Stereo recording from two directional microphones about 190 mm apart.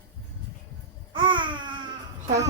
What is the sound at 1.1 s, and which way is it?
Babbling, 25° right (ahead or behind).